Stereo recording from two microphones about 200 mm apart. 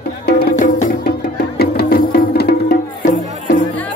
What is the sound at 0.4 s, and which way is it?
Music, 45° left (ahead or behind).